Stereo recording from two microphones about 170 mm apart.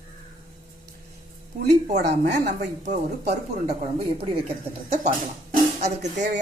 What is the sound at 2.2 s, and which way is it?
Speech, 50° right (ahead or behind).